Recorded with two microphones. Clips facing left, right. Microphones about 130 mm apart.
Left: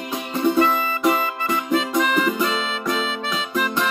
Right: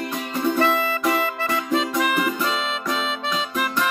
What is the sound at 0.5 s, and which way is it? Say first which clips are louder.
Music: left 1 dB; 20° left (ahead or behind).